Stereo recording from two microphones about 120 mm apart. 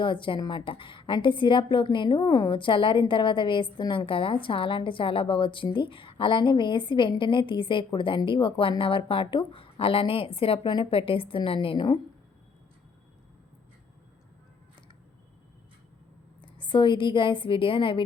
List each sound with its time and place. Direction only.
0.0 s a woman's voice: 45° left (ahead or behind)
16.4 s a woman's voice: 40° left (ahead or behind)